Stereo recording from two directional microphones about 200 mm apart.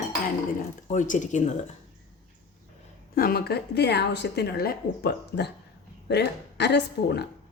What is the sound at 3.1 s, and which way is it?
Speech, 50° left (ahead or behind).